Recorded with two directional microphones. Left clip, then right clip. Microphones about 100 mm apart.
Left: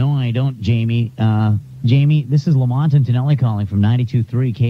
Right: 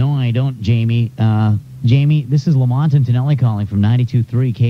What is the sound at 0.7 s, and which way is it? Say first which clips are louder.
Speech: right 1 dB; 30° left (ahead or behind).